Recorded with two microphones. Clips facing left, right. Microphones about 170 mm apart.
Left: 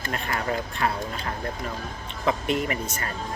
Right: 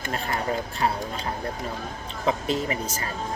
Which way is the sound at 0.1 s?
30° right (ahead or behind).